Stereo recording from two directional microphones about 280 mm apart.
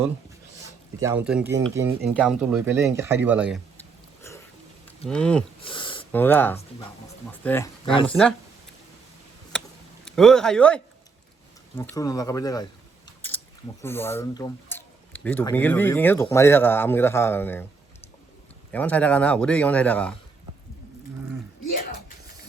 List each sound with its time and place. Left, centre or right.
0.9 s speech: centre
4.2 s a sound: centre
5.0 s speech: centre
5.5 s a sound: centre
6.1 s speech: centre
9.5 s a sound: centre
11.8 s speech: centre
13.1 s chewing: centre
13.8 s speech: centre
18.7 s speech: centre